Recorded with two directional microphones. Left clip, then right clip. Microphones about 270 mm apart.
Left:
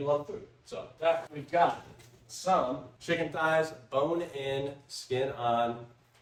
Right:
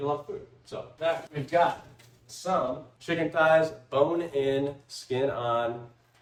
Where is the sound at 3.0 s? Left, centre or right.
Centre.